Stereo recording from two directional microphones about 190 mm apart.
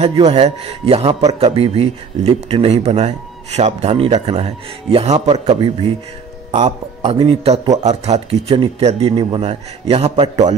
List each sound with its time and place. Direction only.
0.0 s speech: 30° right (ahead or behind)